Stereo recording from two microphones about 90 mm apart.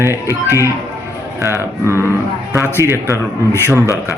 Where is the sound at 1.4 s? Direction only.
30° right (ahead or behind).